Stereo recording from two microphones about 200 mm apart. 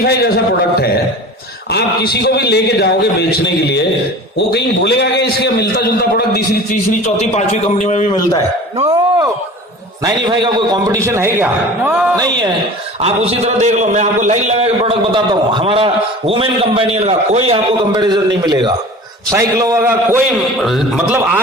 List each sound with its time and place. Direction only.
0.0 s a man's voice: 50° left (ahead or behind)
1.7 s a man's voice: 55° left (ahead or behind)
7.0 s a man's voice: 35° left (ahead or behind)
8.9 s a man's voice: 20° right (ahead or behind)
12.1 s a man's voice: 20° right (ahead or behind)
13.0 s a man's voice: 30° right (ahead or behind); by 20.2 s 10° right (ahead or behind)
20.6 s a man's voice: centre (ahead or behind)